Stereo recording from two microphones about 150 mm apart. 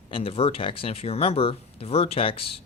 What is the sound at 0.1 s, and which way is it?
Speech, 40° left (ahead or behind).